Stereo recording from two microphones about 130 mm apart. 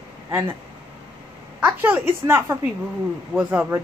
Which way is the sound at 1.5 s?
10° right (ahead or behind).